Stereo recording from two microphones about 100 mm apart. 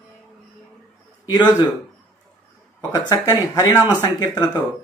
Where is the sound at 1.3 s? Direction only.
45° left (ahead or behind).